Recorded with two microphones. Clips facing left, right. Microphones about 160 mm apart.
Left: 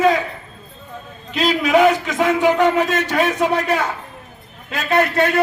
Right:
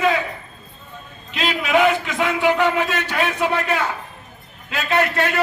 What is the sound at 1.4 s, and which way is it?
A man's voice, 40° left (ahead or behind).